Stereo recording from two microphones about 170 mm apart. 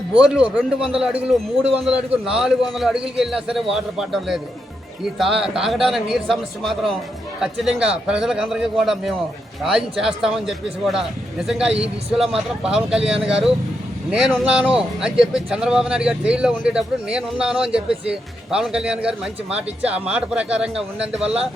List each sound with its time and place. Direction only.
0.5 s speech: 5° right (ahead or behind)